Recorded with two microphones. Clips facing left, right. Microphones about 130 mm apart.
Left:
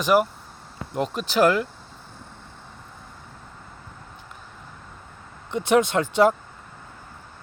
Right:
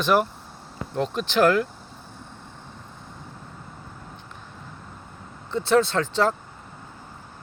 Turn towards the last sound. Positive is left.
turn(degrees=10)  # may be behind; listen again after turning